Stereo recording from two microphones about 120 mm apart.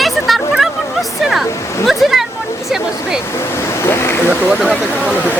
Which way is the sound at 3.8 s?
20° left (ahead or behind).